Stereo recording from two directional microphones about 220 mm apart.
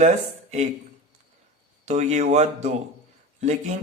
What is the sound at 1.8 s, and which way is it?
Speech, 30° right (ahead or behind).